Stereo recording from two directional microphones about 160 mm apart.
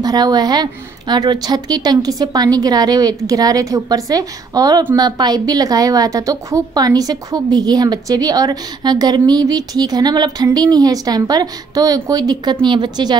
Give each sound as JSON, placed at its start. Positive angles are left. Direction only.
{"t": 0.0, "sound": "a woman's voice", "side_deg": -25}